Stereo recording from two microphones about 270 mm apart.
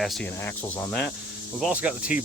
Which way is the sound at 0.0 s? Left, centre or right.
Centre.